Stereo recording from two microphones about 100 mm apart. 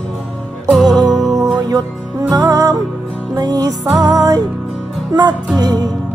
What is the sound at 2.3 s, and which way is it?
Music, 35° right (ahead or behind).